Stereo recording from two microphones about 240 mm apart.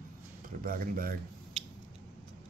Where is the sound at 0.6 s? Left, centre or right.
Right.